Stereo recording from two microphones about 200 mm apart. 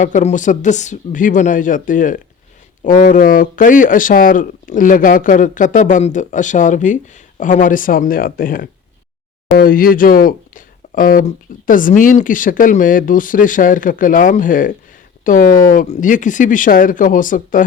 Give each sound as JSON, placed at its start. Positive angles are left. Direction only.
{"t": 0.0, "sound": "speech", "side_deg": 35}